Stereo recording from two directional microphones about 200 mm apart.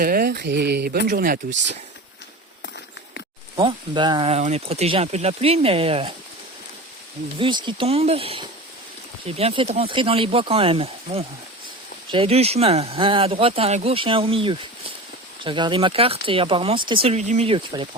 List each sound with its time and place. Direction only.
0.0 s speech: 50° right (ahead or behind)
3.5 s speech: 25° right (ahead or behind)
7.3 s speech: 25° right (ahead or behind)